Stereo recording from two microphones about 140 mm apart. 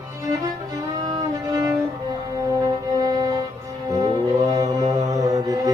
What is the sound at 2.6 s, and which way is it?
Music, 25° right (ahead or behind).